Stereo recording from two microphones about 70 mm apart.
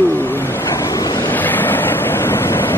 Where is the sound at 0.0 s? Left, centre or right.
Left.